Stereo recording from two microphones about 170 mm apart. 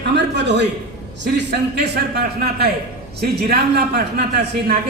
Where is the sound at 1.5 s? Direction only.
75° right (ahead or behind).